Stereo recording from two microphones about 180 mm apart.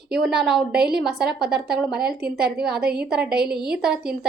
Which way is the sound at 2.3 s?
60° right (ahead or behind).